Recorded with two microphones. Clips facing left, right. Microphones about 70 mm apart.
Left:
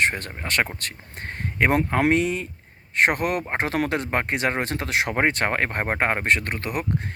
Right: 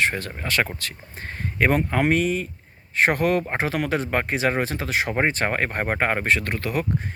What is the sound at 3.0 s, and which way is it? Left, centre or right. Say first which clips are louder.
Speech: right 2 dB; left.